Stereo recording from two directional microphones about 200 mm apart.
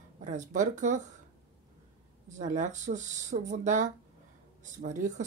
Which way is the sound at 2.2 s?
40° right (ahead or behind).